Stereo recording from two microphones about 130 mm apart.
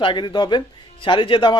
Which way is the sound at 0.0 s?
40° left (ahead or behind).